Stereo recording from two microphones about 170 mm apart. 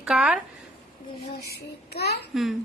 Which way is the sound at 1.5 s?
70° left (ahead or behind).